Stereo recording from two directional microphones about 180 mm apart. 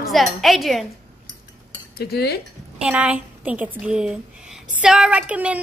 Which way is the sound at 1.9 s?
60° left (ahead or behind).